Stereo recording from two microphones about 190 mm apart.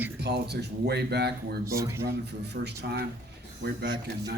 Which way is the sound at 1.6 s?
15° right (ahead or behind).